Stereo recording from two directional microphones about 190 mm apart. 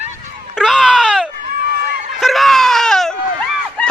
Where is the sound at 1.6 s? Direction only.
50° right (ahead or behind).